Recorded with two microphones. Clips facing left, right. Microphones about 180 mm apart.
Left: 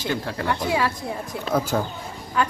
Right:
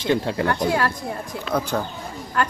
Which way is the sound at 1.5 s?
Centre (ahead or behind).